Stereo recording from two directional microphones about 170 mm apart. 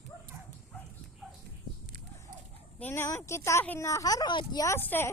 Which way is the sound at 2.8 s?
15° left (ahead or behind).